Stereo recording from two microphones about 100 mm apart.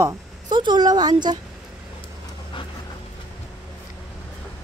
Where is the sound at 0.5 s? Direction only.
50° right (ahead or behind).